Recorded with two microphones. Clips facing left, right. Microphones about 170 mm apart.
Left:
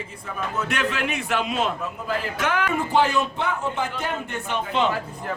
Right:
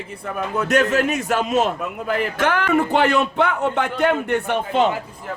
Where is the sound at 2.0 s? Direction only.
60° right (ahead or behind).